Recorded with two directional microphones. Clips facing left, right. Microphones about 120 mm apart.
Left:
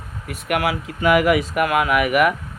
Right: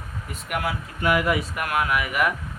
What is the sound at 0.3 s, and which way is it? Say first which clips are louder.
Speech: left 7 dB; 70° left (ahead or behind).